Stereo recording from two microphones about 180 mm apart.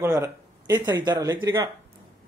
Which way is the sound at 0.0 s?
15° right (ahead or behind).